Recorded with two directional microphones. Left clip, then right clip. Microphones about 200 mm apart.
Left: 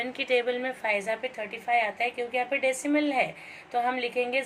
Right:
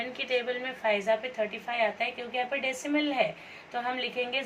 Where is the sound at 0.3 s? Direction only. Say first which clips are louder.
Left 4 dB; 35° left (ahead or behind).